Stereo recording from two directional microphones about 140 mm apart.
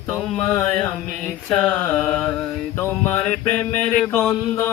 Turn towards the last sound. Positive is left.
turn(degrees=15)  # may be behind; listen again after turning